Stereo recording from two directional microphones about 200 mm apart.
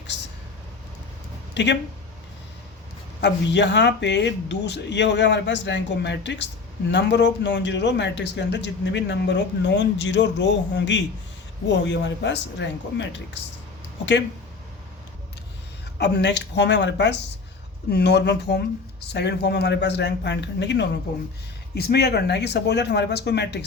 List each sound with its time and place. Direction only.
1.5 s speech: 60° left (ahead or behind)
3.2 s speech: 60° left (ahead or behind)
16.0 s speech: 60° left (ahead or behind)